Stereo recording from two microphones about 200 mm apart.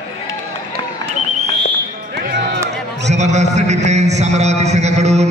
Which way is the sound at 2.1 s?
55° right (ahead or behind).